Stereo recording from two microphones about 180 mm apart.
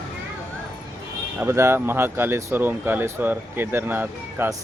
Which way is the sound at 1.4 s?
15° right (ahead or behind).